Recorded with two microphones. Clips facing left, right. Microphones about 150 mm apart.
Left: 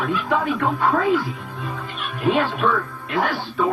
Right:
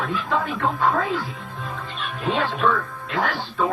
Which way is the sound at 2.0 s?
15° left (ahead or behind).